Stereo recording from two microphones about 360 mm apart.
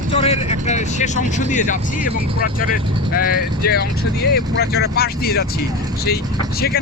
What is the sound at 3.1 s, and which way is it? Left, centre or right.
Speech, left.